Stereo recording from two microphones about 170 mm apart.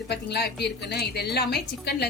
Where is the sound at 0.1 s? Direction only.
75° left (ahead or behind).